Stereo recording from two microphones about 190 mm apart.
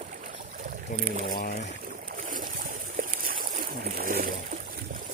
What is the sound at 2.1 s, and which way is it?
Boat, 45° right (ahead or behind).